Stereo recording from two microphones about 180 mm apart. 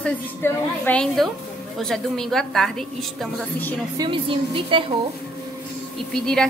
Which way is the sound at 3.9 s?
25° right (ahead or behind).